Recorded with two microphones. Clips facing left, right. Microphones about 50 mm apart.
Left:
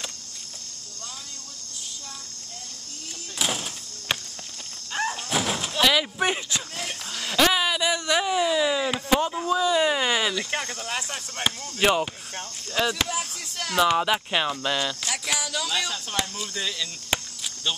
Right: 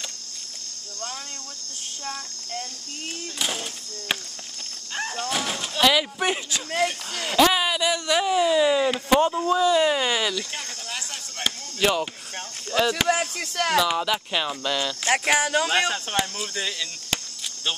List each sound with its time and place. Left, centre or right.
3.3 s a sound: centre
4.9 s door: centre
7.2 s speech: centre
12.8 s speech: centre
13.1 s speech: right
13.9 s speech: centre
15.0 s speech: right
16.3 s speech: centre